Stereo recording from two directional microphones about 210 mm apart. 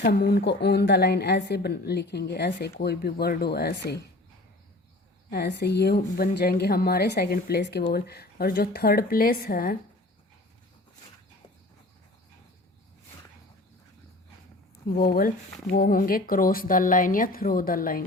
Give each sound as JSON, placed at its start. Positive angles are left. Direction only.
{"t": 0.0, "sound": "a woman's voice", "side_deg": 50}
{"t": 5.3, "sound": "a woman's voice", "side_deg": 55}
{"t": 14.8, "sound": "a woman's voice", "side_deg": 45}